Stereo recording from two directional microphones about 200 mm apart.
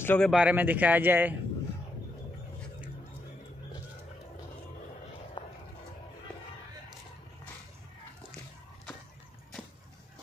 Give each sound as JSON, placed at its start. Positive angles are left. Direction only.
{"t": 0.0, "sound": "speech", "side_deg": 10}
{"t": 0.3, "sound": "speech", "side_deg": -5}
{"t": 5.4, "sound": "a sound", "side_deg": 20}